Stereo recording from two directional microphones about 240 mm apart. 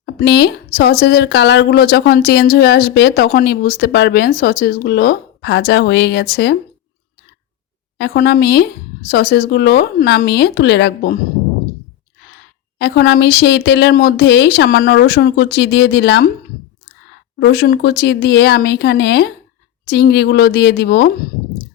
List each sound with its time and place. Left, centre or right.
0.0 s speech: left
7.9 s speech: left
12.8 s speech: left
17.4 s speech: left